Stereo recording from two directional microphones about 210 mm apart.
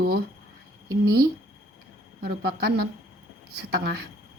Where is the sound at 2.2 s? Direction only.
50° right (ahead or behind).